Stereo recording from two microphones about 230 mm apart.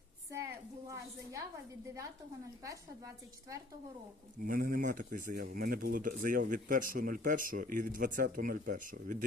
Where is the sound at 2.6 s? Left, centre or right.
Centre.